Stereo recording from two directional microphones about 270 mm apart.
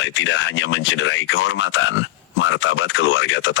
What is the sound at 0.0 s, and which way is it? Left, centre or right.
Speech, left.